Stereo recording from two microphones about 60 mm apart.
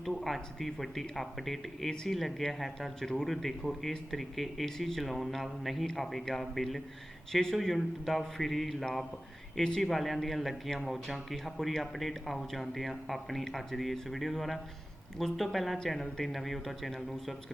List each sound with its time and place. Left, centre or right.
0.0 s speech: centre